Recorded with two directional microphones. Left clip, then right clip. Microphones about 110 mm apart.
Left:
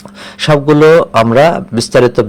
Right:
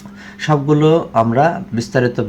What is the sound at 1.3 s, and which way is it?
Speech, 55° left (ahead or behind).